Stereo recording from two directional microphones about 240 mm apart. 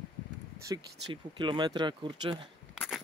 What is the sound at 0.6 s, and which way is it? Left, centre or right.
Speech, right.